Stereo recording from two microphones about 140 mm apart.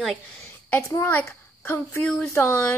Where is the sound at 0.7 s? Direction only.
20° left (ahead or behind).